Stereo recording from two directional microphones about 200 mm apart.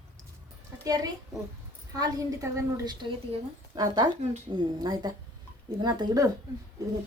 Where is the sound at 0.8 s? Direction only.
20° right (ahead or behind).